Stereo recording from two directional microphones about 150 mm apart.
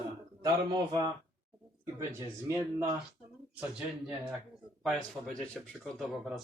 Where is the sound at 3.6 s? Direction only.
5° right (ahead or behind).